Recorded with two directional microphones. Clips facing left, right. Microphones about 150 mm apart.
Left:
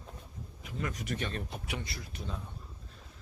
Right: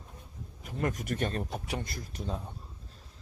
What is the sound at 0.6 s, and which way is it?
Speech, 50° right (ahead or behind).